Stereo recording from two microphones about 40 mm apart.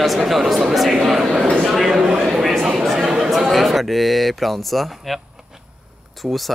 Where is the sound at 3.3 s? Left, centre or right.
Centre.